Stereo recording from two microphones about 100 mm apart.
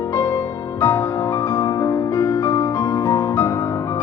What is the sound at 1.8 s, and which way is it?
Music, 30° left (ahead or behind).